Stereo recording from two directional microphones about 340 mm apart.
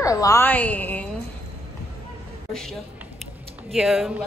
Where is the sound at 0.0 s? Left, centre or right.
Centre.